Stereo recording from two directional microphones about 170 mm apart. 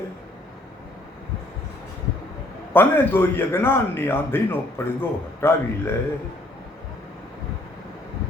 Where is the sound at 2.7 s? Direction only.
10° left (ahead or behind).